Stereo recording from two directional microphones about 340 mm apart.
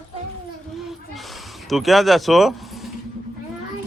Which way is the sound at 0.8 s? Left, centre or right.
Centre.